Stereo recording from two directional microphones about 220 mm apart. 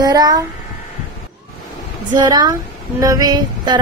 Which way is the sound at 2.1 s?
20° right (ahead or behind).